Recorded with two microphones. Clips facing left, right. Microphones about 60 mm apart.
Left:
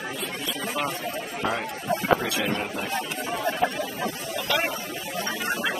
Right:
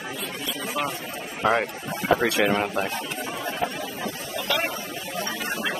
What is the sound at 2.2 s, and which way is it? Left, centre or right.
Speech, right.